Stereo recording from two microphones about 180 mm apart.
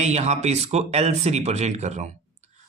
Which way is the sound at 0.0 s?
40° right (ahead or behind).